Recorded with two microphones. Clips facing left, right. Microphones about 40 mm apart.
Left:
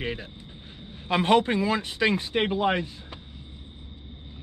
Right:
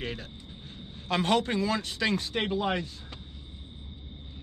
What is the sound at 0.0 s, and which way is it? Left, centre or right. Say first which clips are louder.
Speech: left 4 dB; centre.